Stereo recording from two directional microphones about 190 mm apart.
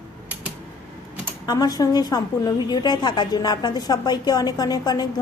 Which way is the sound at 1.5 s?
20° left (ahead or behind).